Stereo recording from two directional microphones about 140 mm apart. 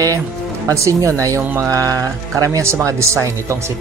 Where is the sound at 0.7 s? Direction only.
20° right (ahead or behind).